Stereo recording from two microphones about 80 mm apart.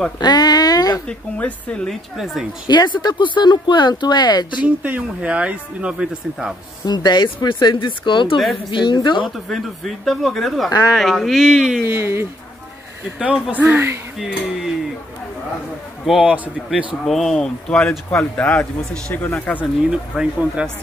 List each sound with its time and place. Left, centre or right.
0.2 s speech: left
1.0 s a woman's voice: centre
2.1 s speech: centre
2.7 s speech: left
4.6 s speech: centre
6.8 s speech: left
9.5 s speech: centre
11.8 s speech: right
13.2 s speech: centre
16.1 s speech: centre
17.0 s speech: centre
19.1 s speech: left
19.9 s speech: centre